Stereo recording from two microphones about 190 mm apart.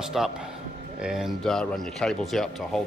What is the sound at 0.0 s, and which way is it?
A man's voice, 5° right (ahead or behind).